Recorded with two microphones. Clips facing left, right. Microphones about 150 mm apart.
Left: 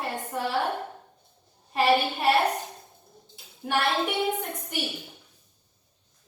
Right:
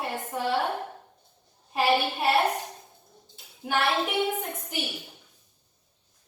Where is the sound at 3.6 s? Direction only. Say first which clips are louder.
Even; centre (ahead or behind).